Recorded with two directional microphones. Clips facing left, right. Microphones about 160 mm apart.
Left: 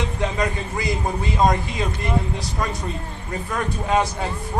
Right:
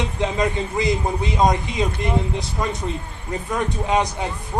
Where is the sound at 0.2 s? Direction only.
20° right (ahead or behind).